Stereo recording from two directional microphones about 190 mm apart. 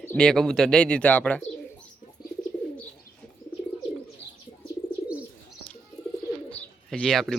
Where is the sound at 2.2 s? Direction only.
55° left (ahead or behind).